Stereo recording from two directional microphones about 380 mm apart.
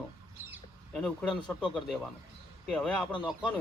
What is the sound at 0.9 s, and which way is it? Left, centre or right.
Speech, centre.